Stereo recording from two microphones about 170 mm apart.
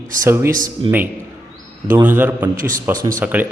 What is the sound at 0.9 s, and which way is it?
Speech, 30° right (ahead or behind).